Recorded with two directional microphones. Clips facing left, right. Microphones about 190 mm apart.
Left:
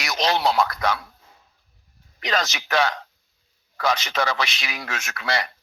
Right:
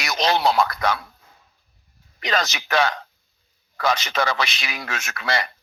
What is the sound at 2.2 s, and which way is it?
Speech, 55° right (ahead or behind).